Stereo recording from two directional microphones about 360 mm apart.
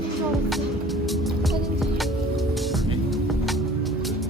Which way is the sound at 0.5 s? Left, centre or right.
Centre.